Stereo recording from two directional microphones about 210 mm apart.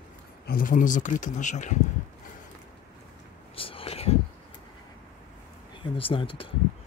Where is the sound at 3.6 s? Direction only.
25° left (ahead or behind).